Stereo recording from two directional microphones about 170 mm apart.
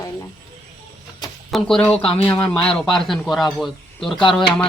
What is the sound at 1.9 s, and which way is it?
Speech, 30° left (ahead or behind).